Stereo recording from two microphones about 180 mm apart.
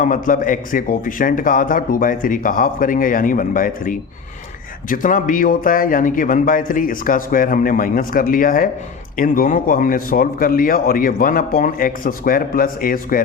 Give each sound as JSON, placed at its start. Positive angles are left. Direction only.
{"t": 0.0, "sound": "speech", "side_deg": 50}